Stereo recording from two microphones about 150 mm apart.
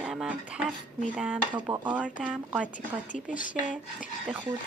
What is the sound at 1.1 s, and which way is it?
Speech, 10° right (ahead or behind).